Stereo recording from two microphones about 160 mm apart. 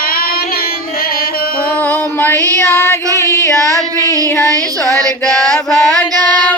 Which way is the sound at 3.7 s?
20° right (ahead or behind).